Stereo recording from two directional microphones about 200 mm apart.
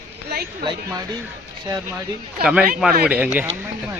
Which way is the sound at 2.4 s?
5° right (ahead or behind).